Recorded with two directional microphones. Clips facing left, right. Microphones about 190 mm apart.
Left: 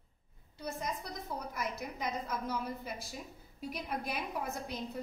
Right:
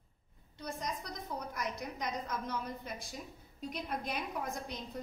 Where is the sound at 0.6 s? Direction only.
5° left (ahead or behind).